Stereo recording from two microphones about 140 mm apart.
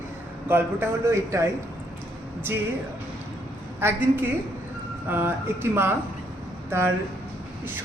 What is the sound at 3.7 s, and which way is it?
Speech, 15° right (ahead or behind).